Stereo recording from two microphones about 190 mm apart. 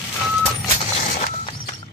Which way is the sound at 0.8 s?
40° left (ahead or behind).